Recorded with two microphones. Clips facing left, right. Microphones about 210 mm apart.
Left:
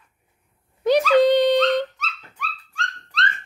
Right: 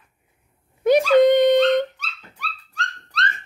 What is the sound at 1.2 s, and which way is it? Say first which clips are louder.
Dog: right 3 dB; 50° right (ahead or behind).